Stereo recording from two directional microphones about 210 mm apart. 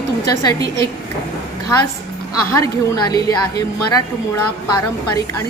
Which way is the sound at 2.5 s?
15° left (ahead or behind).